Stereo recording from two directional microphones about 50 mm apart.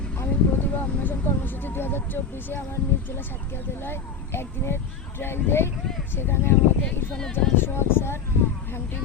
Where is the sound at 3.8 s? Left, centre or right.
Left.